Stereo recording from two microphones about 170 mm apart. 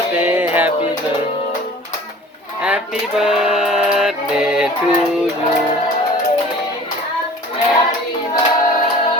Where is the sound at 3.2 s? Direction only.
5° right (ahead or behind).